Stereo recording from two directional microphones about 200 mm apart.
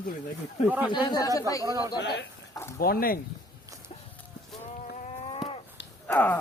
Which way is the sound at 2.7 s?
50° left (ahead or behind).